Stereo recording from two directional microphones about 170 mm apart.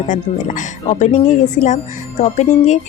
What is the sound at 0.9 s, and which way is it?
A woman's voice, 40° left (ahead or behind).